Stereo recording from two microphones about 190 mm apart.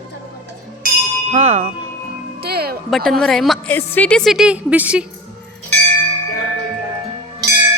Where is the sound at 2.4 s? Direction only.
55° right (ahead or behind).